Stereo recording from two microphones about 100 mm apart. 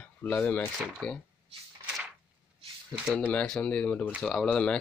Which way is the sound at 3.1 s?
15° left (ahead or behind).